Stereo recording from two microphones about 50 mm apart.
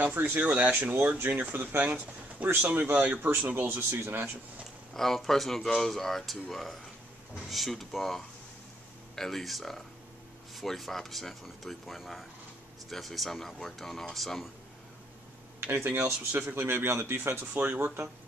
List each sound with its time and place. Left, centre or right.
0.0 s speech: right
0.4 s speech: right
4.0 s speech: right
4.9 s speech: centre
15.6 s speech: right
17.6 s speech: right